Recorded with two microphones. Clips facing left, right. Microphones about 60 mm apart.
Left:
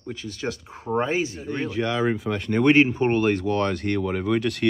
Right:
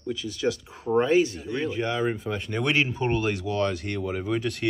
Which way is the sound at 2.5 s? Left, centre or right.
Left.